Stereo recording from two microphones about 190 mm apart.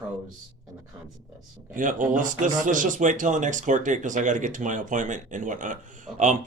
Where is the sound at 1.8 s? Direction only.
45° right (ahead or behind).